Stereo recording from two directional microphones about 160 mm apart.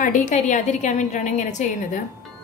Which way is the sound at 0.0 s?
50° left (ahead or behind).